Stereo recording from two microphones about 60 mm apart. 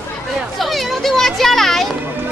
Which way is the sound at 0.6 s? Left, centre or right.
Centre.